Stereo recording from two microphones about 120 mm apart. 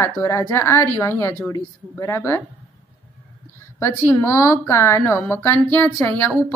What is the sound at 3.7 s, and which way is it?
Speech, 20° left (ahead or behind).